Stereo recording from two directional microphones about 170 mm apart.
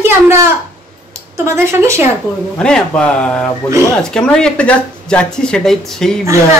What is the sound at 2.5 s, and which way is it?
Speech, 5° left (ahead or behind).